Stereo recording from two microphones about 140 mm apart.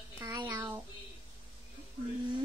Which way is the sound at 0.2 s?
30° right (ahead or behind).